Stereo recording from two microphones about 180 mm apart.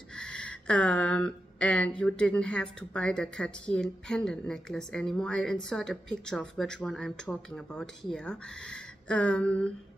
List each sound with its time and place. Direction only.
0.1 s speech: 5° left (ahead or behind)